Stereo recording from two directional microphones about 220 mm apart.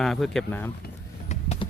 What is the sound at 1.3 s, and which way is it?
Vehicle, 30° left (ahead or behind).